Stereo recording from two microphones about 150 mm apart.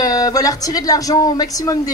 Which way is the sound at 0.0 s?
25° left (ahead or behind).